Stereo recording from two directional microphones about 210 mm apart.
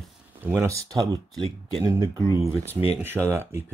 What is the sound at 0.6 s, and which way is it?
Speech, 15° right (ahead or behind).